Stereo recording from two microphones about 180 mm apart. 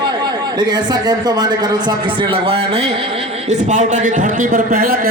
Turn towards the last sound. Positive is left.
turn(degrees=-55)  # may be behind; listen again after turning